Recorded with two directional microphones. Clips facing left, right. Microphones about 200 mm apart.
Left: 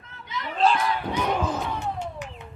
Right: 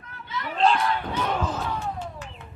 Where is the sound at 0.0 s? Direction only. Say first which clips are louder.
Right 1 dB; 20° left (ahead or behind).